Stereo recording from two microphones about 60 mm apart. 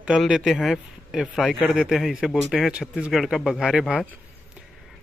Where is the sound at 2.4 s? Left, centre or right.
Centre.